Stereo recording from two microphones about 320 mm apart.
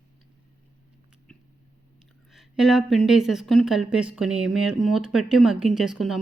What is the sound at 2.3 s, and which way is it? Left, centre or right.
Speech, centre.